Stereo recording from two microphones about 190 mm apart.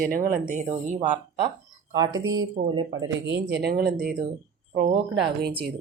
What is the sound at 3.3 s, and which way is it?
Speech, 65° right (ahead or behind).